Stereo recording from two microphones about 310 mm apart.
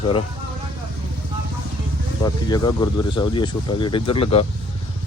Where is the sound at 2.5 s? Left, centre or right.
Centre.